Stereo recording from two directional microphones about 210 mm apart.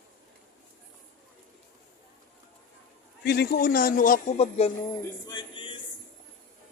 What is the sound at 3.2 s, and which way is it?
A man's voice, 50° left (ahead or behind).